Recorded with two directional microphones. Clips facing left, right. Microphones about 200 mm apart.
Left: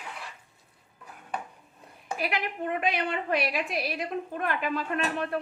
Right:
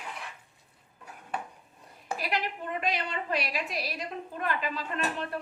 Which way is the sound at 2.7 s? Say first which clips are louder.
Left 2 dB; 55° left (ahead or behind).